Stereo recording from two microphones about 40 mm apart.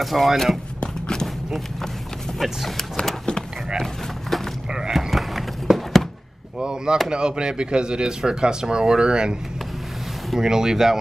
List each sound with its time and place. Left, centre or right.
0.0 s speech: centre
1.2 s a sound: centre
2.3 s speech: centre
3.7 s a sound: centre
4.9 s horse: centre
6.6 s chop: right
7.1 s speech: right
10.4 s speech: centre